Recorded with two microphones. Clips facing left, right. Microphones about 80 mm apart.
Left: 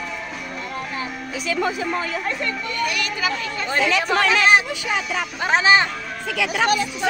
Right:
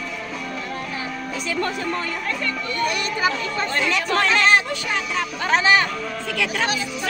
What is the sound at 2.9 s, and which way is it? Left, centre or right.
Speech, right.